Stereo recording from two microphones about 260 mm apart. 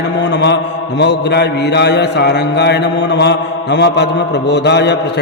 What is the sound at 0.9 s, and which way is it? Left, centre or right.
Mantra, left.